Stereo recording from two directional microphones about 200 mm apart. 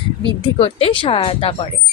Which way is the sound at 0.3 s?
30° left (ahead or behind).